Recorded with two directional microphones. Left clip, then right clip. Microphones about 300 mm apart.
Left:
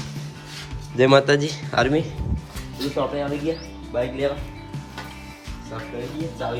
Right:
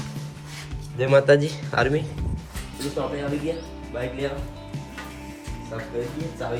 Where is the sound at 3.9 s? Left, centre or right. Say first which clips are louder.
Left 6 dB; centre.